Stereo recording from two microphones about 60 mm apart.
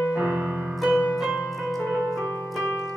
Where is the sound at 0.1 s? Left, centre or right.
Right.